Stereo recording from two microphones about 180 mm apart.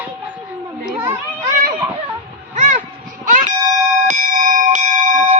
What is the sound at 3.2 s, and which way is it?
Music, 45° right (ahead or behind).